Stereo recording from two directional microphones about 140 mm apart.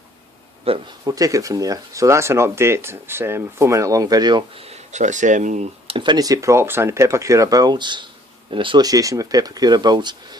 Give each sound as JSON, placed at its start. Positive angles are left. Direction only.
{"t": 0.7, "sound": "speech", "side_deg": -45}
{"t": 1.0, "sound": "speech", "side_deg": -25}
{"t": 4.6, "sound": "speech", "side_deg": -50}
{"t": 5.9, "sound": "speech", "side_deg": -35}